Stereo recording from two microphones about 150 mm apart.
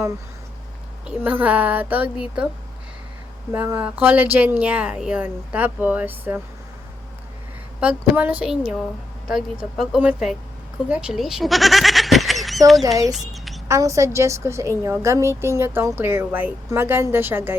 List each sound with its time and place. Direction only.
1.0 s a woman's voice: 10° right (ahead or behind)
3.5 s a woman's voice: 10° right (ahead or behind)
7.8 s a woman's voice: 10° right (ahead or behind)
13.1 s a sound: centre (ahead or behind)
13.7 s a woman's voice: 20° right (ahead or behind)